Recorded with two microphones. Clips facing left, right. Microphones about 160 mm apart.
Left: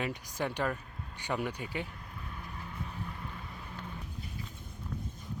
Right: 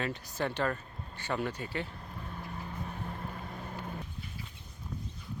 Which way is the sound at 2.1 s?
35° right (ahead or behind).